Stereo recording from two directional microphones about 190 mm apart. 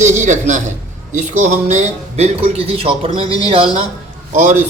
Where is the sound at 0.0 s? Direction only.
40° right (ahead or behind).